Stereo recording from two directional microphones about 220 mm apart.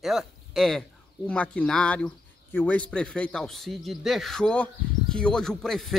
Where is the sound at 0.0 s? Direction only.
Centre (ahead or behind).